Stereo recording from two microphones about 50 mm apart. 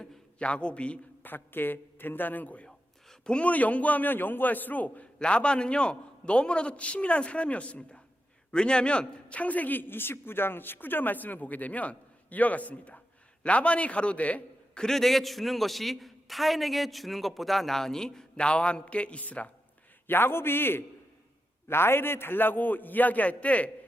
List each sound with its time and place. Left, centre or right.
0.3 s a man's voice: left
1.2 s a man's voice: left
2.6 s a man's voice: centre; by 5.0 s left
5.2 s a man's voice: left
14.8 s a man's voice: centre; by 19.5 s left
20.1 s a man's voice: left